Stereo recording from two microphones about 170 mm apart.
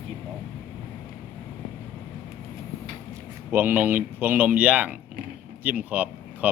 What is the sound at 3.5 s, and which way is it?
Speech, 10° right (ahead or behind).